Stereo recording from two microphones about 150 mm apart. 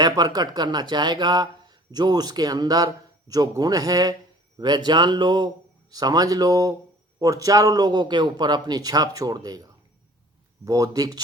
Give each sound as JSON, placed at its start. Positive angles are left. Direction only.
{"t": 0.0, "sound": "speech", "side_deg": -25}
{"t": 10.7, "sound": "speech", "side_deg": -25}